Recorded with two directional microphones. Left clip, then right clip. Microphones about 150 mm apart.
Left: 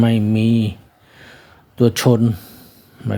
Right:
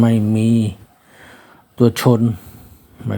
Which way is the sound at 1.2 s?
15° left (ahead or behind).